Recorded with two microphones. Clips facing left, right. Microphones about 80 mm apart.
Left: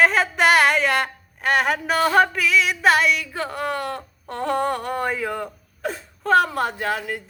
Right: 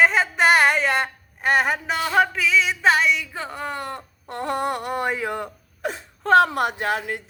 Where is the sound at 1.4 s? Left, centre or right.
Centre.